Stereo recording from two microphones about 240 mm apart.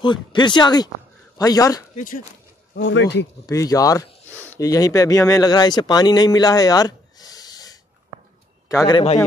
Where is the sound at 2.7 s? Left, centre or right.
Left.